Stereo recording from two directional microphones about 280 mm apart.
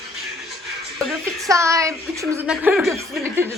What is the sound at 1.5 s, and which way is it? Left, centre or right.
A woman's voice, centre.